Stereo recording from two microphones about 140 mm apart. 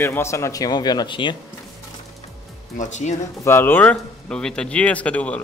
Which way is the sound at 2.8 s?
55° left (ahead or behind).